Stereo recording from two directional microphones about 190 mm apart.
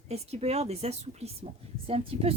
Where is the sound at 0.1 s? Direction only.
35° right (ahead or behind).